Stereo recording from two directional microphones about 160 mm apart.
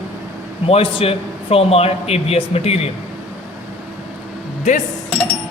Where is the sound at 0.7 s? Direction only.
40° left (ahead or behind).